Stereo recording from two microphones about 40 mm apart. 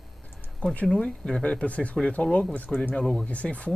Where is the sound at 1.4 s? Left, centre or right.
Left.